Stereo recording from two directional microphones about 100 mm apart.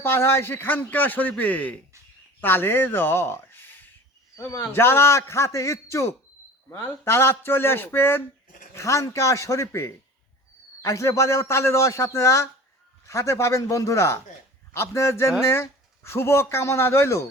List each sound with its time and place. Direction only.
0.0 s a man's voice: 25° left (ahead or behind)